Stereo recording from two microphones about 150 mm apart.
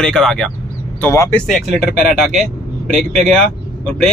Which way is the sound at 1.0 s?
15° left (ahead or behind).